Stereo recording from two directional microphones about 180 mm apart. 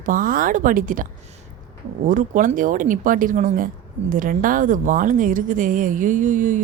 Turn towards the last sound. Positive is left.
turn(degrees=-45)  # may be behind; listen again after turning